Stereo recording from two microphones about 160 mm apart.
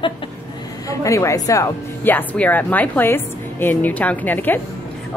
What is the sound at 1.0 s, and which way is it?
A woman's voice, 20° left (ahead or behind).